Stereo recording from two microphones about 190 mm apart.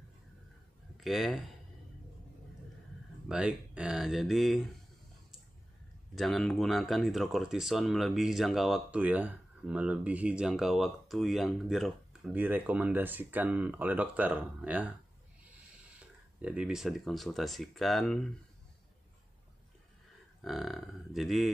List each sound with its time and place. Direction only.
0.9 s speech: centre (ahead or behind)
3.3 s speech: 5° right (ahead or behind)
6.1 s speech: centre (ahead or behind)
20.4 s speech: centre (ahead or behind)